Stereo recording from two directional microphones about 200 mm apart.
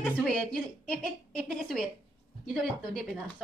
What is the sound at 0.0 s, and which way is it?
A woman's voice, 5° left (ahead or behind).